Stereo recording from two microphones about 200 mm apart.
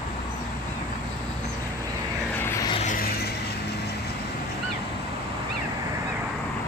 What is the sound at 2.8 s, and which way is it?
Vehicle, 45° left (ahead or behind).